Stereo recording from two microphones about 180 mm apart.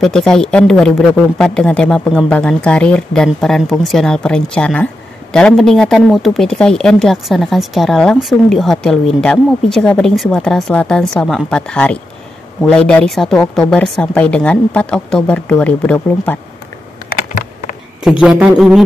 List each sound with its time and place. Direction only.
0.0 s a woman's voice: 5° left (ahead or behind)
17.3 s a sound: 45° left (ahead or behind)
18.2 s a woman's voice: 5° right (ahead or behind)